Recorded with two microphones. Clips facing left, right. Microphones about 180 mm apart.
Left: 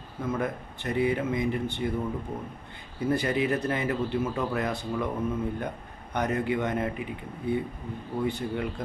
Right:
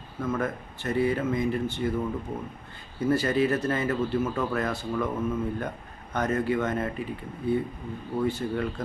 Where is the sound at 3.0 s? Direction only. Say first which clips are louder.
Right 2 dB; 15° left (ahead or behind).